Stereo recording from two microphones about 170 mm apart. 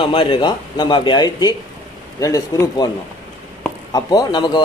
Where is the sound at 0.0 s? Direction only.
30° left (ahead or behind).